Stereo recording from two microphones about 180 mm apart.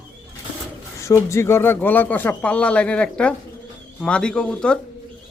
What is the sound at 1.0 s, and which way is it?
Speech, 15° left (ahead or behind).